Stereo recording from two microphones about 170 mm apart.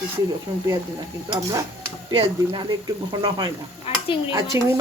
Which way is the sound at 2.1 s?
30° right (ahead or behind).